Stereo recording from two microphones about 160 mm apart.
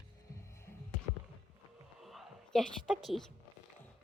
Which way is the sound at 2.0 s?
Centre (ahead or behind).